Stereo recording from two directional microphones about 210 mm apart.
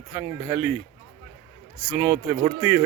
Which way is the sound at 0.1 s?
10° right (ahead or behind).